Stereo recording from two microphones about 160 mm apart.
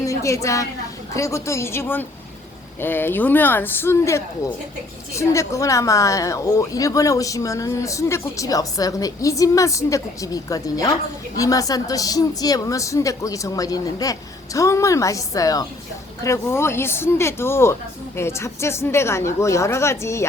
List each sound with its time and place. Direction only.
0.0 s a woman's voice: 20° left (ahead or behind)